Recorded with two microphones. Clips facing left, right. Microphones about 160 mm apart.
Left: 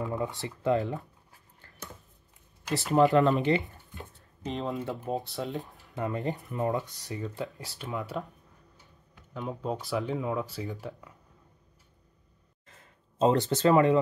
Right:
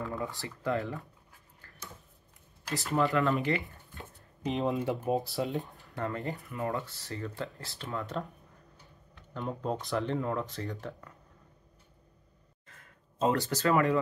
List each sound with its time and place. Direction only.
0.0 s speech: 20° left (ahead or behind)
3.0 s speech: 20° left (ahead or behind)
4.5 s speech: centre (ahead or behind)
4.8 s speech: 15° right (ahead or behind)
5.2 s speech: centre (ahead or behind)
5.9 s speech: 20° left (ahead or behind)
8.0 s speech: 5° left (ahead or behind)
12.6 s a sound: 25° left (ahead or behind)